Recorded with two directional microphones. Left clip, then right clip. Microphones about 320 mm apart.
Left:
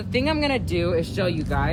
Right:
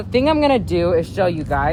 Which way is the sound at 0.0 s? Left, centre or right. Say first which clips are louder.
Right 7 dB; right.